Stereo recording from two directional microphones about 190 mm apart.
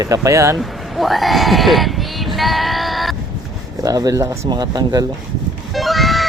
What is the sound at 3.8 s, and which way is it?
Speech, 20° right (ahead or behind).